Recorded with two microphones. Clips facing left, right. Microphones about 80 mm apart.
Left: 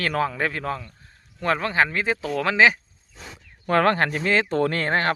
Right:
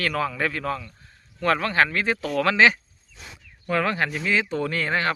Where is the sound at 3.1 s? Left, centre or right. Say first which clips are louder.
Left 3 dB; left.